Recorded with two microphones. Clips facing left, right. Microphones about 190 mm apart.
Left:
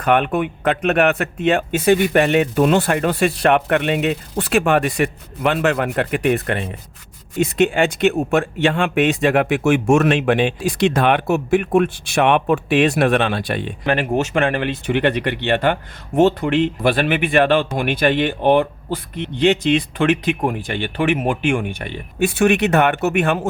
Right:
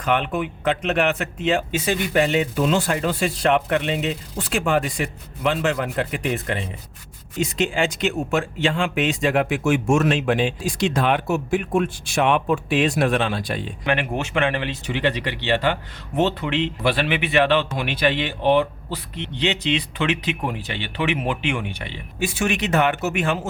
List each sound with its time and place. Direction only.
0.0 s speech: 60° left (ahead or behind)
13.8 s speech: 40° left (ahead or behind); by 23.5 s 60° left (ahead or behind)